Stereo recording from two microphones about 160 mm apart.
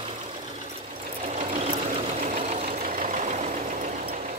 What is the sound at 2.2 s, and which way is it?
Vehicle, 45° right (ahead or behind).